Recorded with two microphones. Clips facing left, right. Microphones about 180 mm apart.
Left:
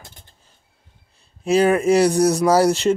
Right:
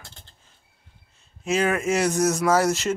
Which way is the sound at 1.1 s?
35° left (ahead or behind).